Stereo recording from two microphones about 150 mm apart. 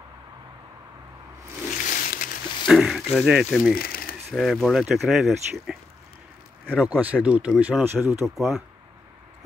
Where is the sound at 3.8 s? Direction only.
85° left.